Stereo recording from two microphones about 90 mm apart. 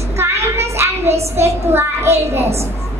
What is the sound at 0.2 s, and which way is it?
A child's voice, 30° right (ahead or behind).